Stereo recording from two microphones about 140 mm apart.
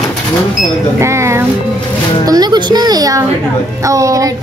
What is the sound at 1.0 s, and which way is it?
Music, 20° right (ahead or behind).